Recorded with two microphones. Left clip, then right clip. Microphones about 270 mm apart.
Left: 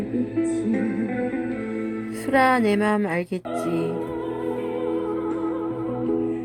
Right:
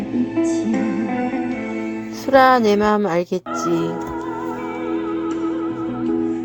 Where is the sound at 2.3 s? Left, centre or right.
Centre.